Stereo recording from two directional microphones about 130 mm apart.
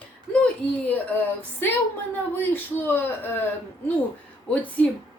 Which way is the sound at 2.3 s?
15° left (ahead or behind).